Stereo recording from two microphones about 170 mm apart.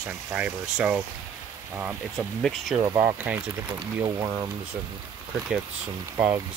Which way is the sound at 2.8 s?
20° right (ahead or behind).